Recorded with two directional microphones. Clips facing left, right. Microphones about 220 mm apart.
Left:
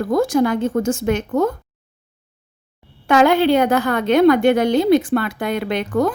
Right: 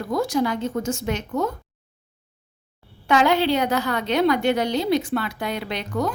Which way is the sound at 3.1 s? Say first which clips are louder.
Left 5 dB; 50° left (ahead or behind).